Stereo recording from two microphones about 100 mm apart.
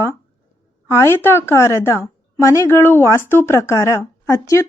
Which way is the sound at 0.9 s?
25° left (ahead or behind).